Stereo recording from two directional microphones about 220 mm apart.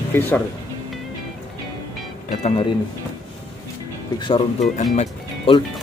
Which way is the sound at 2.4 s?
25° left (ahead or behind).